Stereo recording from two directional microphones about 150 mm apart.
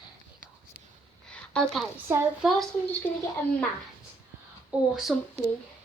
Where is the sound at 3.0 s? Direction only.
15° left (ahead or behind).